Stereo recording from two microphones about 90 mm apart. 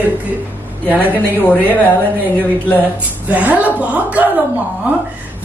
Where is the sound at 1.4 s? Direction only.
20° left (ahead or behind).